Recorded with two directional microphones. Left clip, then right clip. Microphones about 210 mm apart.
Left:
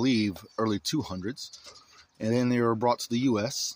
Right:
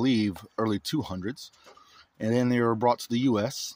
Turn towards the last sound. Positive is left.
turn(degrees=-15)  # may be behind; listen again after turning